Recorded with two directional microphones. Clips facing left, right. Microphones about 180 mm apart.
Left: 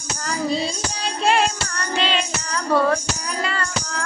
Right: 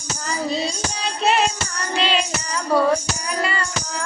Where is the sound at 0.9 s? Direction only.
Centre (ahead or behind).